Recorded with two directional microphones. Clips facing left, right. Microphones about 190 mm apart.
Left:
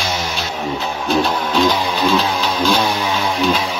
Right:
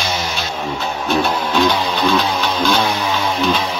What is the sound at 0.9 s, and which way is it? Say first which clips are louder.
Music: even; 5° right (ahead or behind).